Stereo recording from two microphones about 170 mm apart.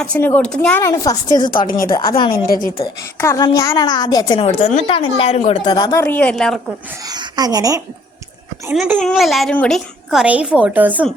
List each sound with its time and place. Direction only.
0.0 s a woman's voice: 10° left (ahead or behind)
0.8 s a woman's voice: 15° left (ahead or behind)
2.3 s a woman's voice: 60° left (ahead or behind)
3.2 s a woman's voice: 15° left (ahead or behind)
4.4 s speech: 40° left (ahead or behind)
5.6 s a woman's voice: 25° left (ahead or behind); by 6.6 s 5° left (ahead or behind)
7.0 s speech: 25° right (ahead or behind)
8.7 s a woman's voice: 5° right (ahead or behind)